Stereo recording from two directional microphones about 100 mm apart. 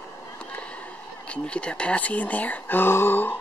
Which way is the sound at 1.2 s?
10° left (ahead or behind).